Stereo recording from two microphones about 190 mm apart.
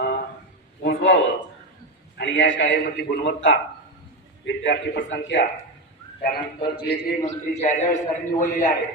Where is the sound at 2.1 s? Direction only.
70° left (ahead or behind).